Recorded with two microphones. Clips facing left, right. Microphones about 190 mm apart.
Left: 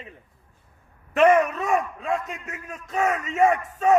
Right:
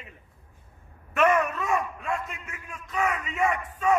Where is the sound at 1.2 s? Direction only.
35° left (ahead or behind).